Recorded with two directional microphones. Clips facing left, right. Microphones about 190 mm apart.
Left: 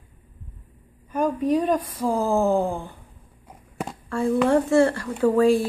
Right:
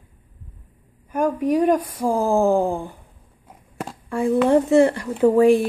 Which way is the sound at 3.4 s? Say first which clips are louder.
Even; centre (ahead or behind).